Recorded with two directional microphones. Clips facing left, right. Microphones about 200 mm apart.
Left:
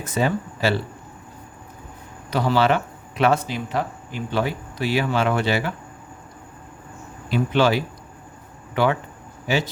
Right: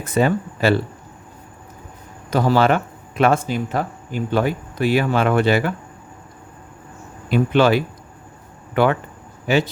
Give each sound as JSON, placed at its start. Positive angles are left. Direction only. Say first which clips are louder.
{"t": 0.0, "sound": "speech", "louder": "right 4 dB", "side_deg": -55}
{"t": 2.3, "sound": "speech", "louder": "right 3 dB", "side_deg": -45}
{"t": 7.3, "sound": "speech", "louder": "right 4 dB", "side_deg": -55}